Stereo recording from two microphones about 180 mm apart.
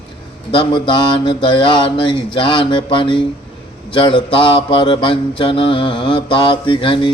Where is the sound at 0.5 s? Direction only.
25° left (ahead or behind).